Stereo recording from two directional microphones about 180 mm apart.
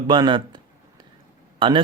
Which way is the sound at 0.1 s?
25° right (ahead or behind).